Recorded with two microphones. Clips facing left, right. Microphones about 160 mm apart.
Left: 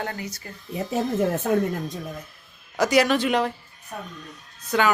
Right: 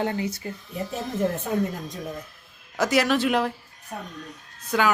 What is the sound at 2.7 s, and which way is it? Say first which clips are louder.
Speech: left 2 dB; centre (ahead or behind).